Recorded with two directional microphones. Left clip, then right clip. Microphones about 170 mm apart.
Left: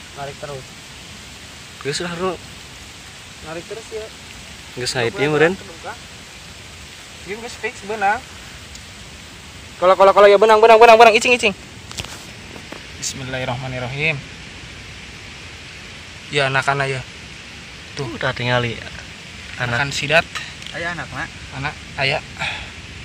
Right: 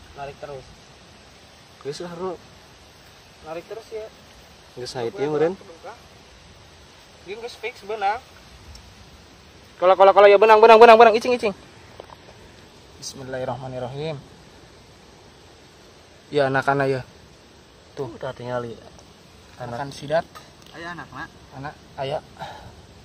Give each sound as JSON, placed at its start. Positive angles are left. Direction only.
{"t": 0.2, "sound": "speech", "side_deg": -15}
{"t": 1.9, "sound": "speech", "side_deg": -15}
{"t": 4.7, "sound": "speech", "side_deg": -10}
{"t": 7.9, "sound": "speech", "side_deg": -25}
{"t": 9.8, "sound": "a man's voice", "side_deg": -35}
{"t": 13.1, "sound": "a man's voice", "side_deg": -30}
{"t": 16.3, "sound": "a man's voice", "side_deg": -55}
{"t": 18.1, "sound": "speech", "side_deg": -5}
{"t": 19.8, "sound": "speech", "side_deg": -30}
{"t": 20.7, "sound": "speech", "side_deg": 15}
{"t": 21.5, "sound": "speech", "side_deg": -25}